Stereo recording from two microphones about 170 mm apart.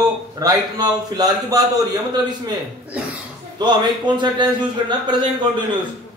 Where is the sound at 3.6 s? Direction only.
25° right (ahead or behind).